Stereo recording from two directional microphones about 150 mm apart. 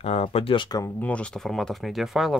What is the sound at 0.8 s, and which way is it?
Speech, 10° left (ahead or behind).